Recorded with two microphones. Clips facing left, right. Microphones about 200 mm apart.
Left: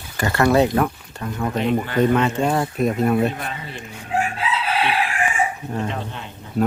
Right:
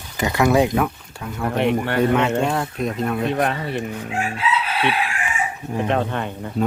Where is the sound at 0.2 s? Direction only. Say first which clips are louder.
Even; 15° right (ahead or behind); by 3.3 s 5° left (ahead or behind).